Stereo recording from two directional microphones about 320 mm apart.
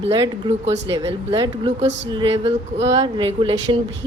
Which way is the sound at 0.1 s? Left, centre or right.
Centre.